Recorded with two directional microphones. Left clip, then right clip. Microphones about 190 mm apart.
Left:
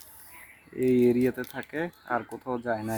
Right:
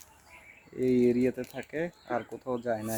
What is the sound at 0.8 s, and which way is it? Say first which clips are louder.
Speech: left 3 dB; 5° left (ahead or behind).